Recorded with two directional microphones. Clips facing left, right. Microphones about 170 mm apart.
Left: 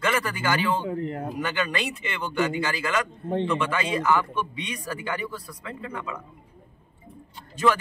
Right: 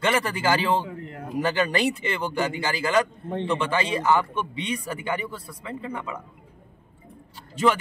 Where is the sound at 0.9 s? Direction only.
30° left (ahead or behind).